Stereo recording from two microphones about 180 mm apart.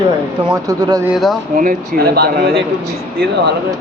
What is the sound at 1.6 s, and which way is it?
Speech, 60° right (ahead or behind).